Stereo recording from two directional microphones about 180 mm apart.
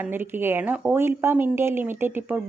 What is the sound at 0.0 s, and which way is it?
Speech, 10° right (ahead or behind).